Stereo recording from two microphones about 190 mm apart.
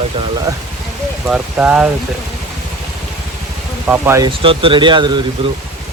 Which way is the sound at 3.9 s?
15° right (ahead or behind).